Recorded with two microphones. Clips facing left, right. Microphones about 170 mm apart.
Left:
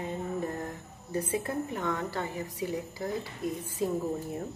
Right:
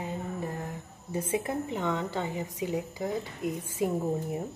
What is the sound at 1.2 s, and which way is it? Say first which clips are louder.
A woman's voice: right 4 dB; 20° right (ahead or behind).